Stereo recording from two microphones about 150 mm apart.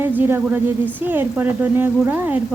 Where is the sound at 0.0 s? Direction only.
15° right (ahead or behind).